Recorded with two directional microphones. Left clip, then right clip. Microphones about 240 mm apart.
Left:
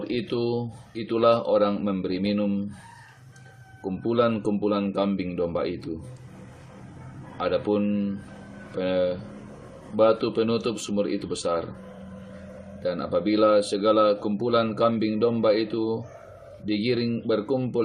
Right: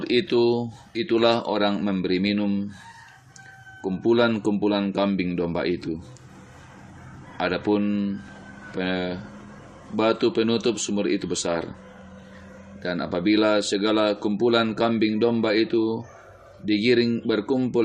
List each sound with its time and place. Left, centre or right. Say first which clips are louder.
0.0 s speech: right 7 dB; centre
3.8 s speech: right 3 dB; right
7.3 s speech: right 1 dB; right
12.8 s speech: even; right